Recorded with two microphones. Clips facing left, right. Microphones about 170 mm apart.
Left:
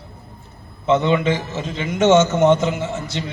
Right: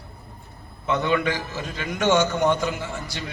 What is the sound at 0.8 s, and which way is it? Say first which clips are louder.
A man's voice: left 6 dB; 20° left (ahead or behind).